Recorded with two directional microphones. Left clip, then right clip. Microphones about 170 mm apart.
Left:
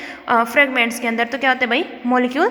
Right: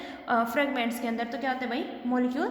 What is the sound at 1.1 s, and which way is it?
A woman's voice, 50° left (ahead or behind).